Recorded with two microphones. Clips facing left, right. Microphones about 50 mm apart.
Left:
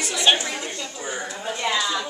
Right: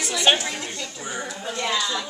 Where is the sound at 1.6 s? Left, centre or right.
Centre.